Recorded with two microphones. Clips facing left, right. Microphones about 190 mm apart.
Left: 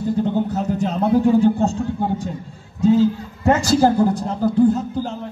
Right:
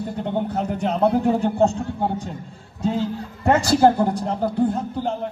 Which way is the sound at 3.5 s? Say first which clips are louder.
Even; 60° right (ahead or behind).